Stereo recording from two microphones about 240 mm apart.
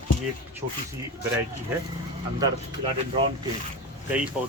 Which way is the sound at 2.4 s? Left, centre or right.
Right.